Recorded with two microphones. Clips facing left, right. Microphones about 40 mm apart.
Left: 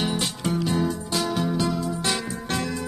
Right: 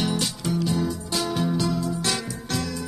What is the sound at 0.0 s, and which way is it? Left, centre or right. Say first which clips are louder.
Music: even; centre.